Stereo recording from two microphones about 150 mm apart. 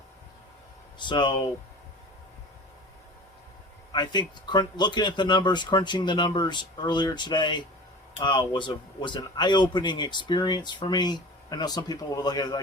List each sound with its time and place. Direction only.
0.9 s speech: 30° left (ahead or behind)
3.9 s speech: 30° left (ahead or behind)